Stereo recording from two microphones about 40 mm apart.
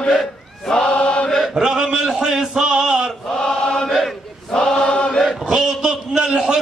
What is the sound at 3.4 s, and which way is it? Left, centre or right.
Chant, centre.